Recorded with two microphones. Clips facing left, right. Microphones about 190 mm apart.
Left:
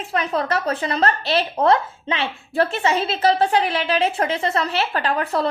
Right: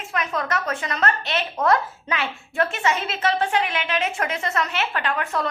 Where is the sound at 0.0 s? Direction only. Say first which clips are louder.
Left 4 dB; 35° left (ahead or behind).